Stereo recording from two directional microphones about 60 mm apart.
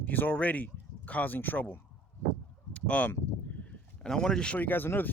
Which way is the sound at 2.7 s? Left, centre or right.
Centre.